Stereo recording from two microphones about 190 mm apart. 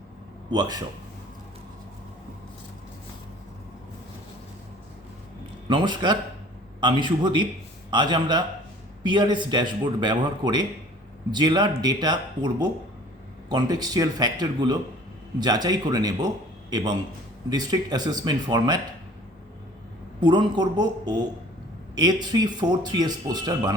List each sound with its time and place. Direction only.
0.5 s speech: 20° right (ahead or behind)
5.6 s speech: 25° right (ahead or behind)
20.2 s speech: 25° right (ahead or behind)
21.9 s speech: 20° right (ahead or behind)